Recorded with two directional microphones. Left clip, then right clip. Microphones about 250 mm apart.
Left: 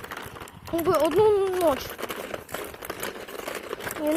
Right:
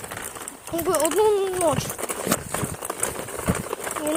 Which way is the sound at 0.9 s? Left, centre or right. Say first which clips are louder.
Even; right.